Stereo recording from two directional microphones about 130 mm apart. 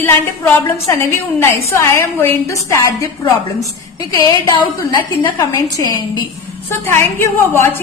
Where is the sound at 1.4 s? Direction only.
20° left (ahead or behind).